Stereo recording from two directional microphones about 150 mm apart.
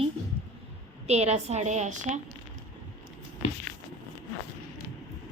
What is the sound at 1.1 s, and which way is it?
A woman's voice, 45° right (ahead or behind).